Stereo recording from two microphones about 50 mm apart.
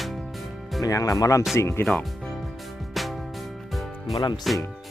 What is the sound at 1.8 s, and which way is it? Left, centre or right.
Speech, left.